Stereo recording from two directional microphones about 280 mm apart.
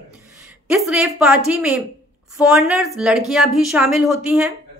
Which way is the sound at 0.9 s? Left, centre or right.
Centre.